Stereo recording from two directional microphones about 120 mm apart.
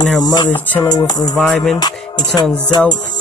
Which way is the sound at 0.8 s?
35° left (ahead or behind).